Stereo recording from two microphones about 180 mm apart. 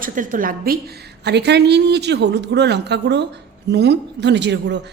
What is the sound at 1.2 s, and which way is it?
A woman's voice, 70° right (ahead or behind).